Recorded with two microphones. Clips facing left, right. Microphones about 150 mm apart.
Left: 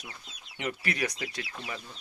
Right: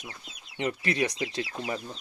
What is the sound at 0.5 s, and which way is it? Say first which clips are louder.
Speech: right 5 dB; 25° right (ahead or behind).